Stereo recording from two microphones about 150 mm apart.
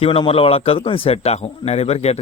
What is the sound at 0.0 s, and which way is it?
Speech, 40° left (ahead or behind).